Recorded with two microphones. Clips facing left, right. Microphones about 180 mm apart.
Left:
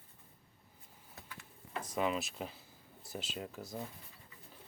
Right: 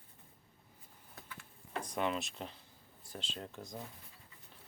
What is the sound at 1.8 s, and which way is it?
Speech, 5° left (ahead or behind).